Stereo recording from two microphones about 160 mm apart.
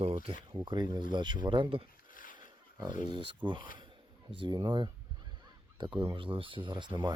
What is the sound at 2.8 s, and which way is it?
Speech, 25° right (ahead or behind).